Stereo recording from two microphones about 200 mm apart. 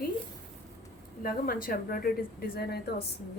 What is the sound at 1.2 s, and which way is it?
Speech, 45° left (ahead or behind).